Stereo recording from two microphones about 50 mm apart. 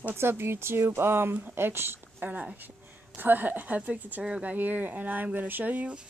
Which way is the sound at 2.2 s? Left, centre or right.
Right.